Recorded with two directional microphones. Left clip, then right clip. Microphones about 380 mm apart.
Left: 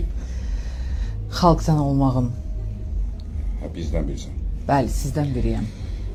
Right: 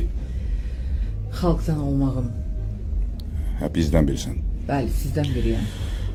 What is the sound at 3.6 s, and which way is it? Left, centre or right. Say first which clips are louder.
Speech: right 8 dB; right.